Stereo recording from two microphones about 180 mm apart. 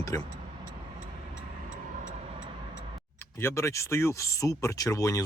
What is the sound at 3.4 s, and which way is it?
Speech, 15° left (ahead or behind).